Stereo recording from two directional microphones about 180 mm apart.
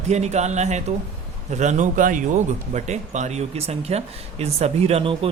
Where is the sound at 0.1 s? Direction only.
40° right (ahead or behind).